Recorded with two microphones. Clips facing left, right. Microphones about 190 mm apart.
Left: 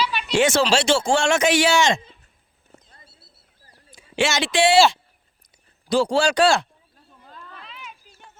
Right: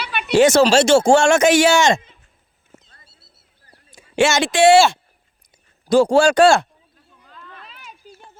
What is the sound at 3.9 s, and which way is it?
Speech, 45° right (ahead or behind).